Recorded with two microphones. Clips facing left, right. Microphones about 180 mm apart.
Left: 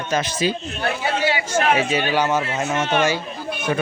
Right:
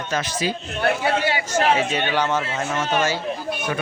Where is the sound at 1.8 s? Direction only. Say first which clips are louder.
Left 2 dB; 10° left (ahead or behind).